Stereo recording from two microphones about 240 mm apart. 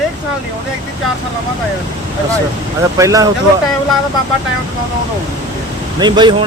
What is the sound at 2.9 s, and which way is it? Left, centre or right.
Speech, centre.